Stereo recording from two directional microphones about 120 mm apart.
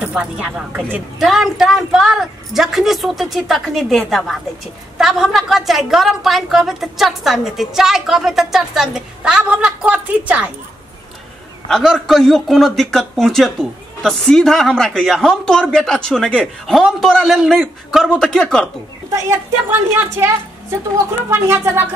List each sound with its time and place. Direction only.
0.0 s a woman's voice: 10° right (ahead or behind)
11.7 s a woman's voice: centre (ahead or behind)
19.1 s a woman's voice: 25° right (ahead or behind)
21.3 s a woman's voice: 20° right (ahead or behind)